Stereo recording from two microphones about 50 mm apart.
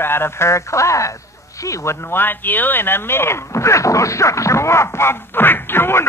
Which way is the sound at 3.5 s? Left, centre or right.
Left.